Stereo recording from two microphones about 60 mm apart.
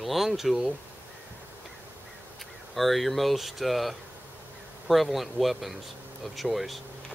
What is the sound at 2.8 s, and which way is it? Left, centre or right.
Speech, centre.